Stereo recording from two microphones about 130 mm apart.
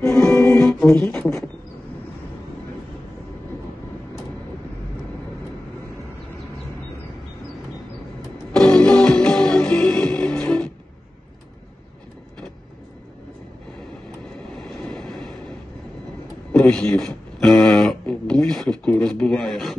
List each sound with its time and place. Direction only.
0.6 s music: 5° left (ahead or behind)
0.9 s speech: 5° left (ahead or behind)
8.5 s music: 5° left (ahead or behind)
14.9 s vehicle: 5° left (ahead or behind)
16.5 s a sound: 5° left (ahead or behind)